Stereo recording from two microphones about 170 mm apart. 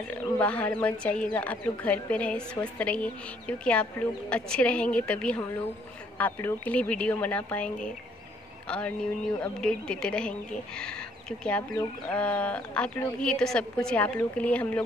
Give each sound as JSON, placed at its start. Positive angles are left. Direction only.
{"t": 0.1, "sound": "speech", "side_deg": 10}